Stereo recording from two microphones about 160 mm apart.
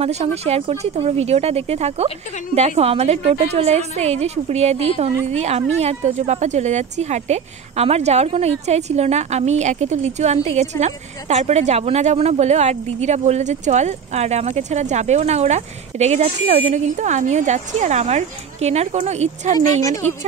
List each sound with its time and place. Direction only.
0.0 s a woman's voice: 40° right (ahead or behind)